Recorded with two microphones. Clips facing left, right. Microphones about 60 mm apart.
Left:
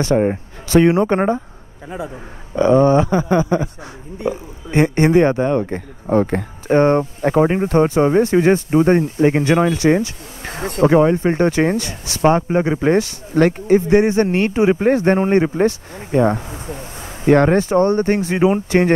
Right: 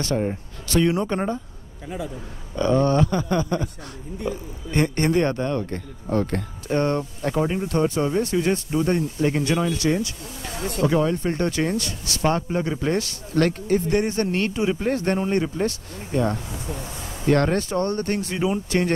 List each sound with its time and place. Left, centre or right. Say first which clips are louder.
0.1 s speech: left 9 dB; left; by 6.4 s centre
6.7 s speech: left 9 dB; left
15.1 s speech: left 8 dB; left
17.3 s speech: left 7 dB; left